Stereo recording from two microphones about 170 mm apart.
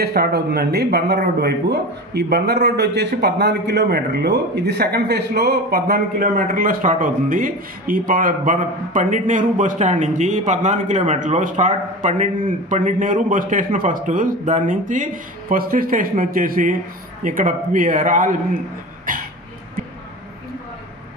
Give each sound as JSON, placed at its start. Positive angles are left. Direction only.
{"t": 0.0, "sound": "a man's voice", "side_deg": -65}
{"t": 19.1, "sound": "cough", "side_deg": -55}